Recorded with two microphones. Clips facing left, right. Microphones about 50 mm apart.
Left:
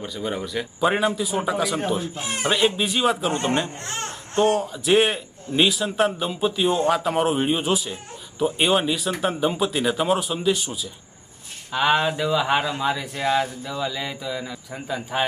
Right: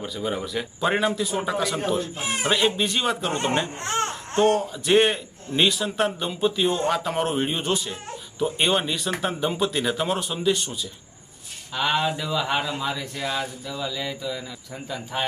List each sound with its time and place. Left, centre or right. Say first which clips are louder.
0.0 s a man's voice: even; centre
2.1 s speech: even; centre
2.5 s a man's voice: left 1 dB; centre
3.8 s speech: right 6 dB; right
4.4 s a man's voice: even; centre